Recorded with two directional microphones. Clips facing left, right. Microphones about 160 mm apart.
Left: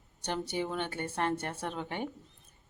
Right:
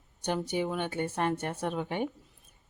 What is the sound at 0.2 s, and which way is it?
Speech, 15° right (ahead or behind).